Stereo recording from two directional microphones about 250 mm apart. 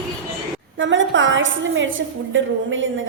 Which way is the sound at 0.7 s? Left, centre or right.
Right.